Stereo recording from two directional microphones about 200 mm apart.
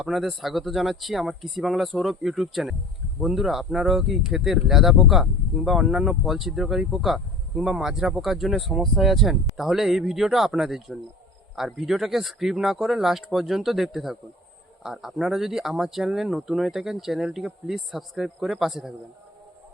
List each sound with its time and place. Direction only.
0.0 s speech: centre (ahead or behind)